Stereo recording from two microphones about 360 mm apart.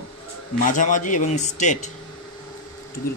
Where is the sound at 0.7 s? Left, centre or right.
Left.